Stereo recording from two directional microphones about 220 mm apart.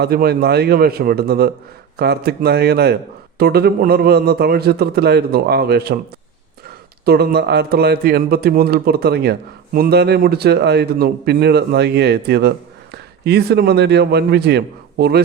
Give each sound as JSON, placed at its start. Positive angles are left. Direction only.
{"t": 0.0, "sound": "speech", "side_deg": -45}
{"t": 7.0, "sound": "speech", "side_deg": -45}